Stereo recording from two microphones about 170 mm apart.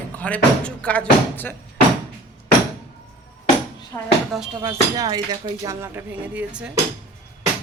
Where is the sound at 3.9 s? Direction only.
20° left (ahead or behind).